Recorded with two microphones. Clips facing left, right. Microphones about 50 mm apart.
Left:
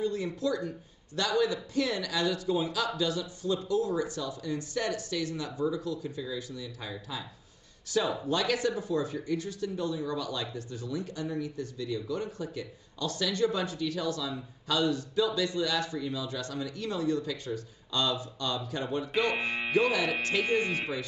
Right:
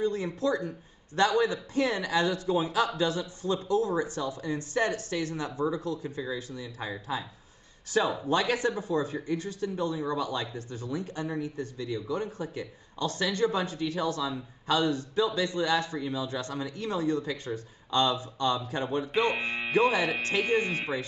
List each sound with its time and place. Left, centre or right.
0.0 s speech: right